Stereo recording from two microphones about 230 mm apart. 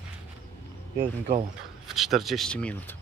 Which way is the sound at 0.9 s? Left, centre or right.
Right.